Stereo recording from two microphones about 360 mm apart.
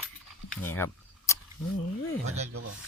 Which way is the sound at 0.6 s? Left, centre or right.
Centre.